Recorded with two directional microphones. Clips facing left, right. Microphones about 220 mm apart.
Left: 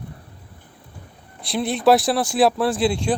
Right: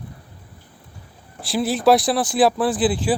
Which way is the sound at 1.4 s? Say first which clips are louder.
Right 1 dB; centre (ahead or behind).